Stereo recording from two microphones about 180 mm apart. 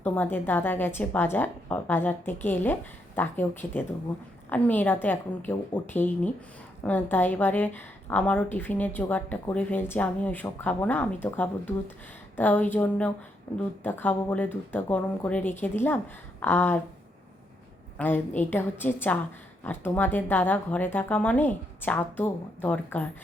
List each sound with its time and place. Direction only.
0.0 s speech: 10° left (ahead or behind)
17.9 s speech: 10° left (ahead or behind)